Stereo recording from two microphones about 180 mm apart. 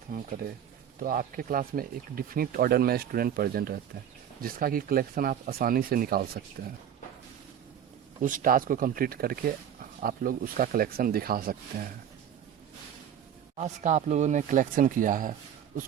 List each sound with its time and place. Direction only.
0.1 s speech: 50° right (ahead or behind)
8.2 s speech: 50° right (ahead or behind)
13.6 s speech: 40° right (ahead or behind)